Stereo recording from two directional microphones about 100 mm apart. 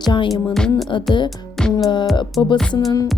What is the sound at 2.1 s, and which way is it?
Speech, 50° left (ahead or behind).